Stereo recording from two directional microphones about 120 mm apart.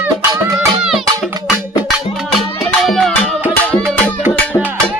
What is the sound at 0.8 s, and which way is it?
Music, 5° right (ahead or behind).